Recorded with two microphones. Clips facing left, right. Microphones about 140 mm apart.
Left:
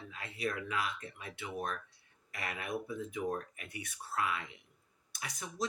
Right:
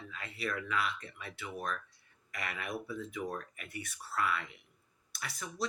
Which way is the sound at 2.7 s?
20° left (ahead or behind).